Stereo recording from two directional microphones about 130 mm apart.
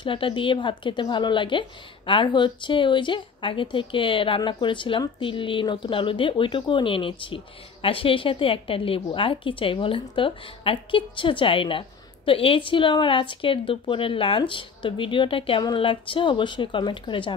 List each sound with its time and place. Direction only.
0.0 s speech: 40° left (ahead or behind)